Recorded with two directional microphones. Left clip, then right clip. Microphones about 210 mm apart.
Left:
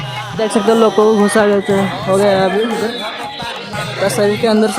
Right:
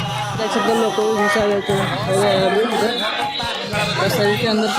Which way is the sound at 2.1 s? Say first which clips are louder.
Left 4 dB; 30° left (ahead or behind).